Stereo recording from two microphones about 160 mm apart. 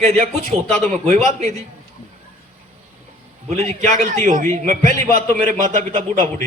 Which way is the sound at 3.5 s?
45° right (ahead or behind).